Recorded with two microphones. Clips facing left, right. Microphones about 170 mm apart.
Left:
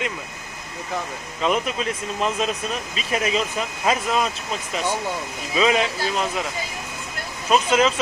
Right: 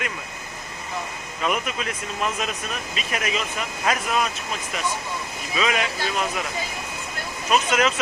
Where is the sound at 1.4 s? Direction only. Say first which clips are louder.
Left 3 dB; 30° left (ahead or behind).